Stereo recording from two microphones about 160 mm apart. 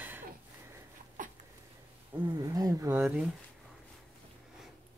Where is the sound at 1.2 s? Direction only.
55° right (ahead or behind).